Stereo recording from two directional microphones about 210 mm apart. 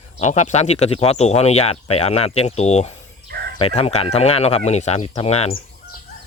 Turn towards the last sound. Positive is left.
turn(degrees=30)  # may be behind; listen again after turning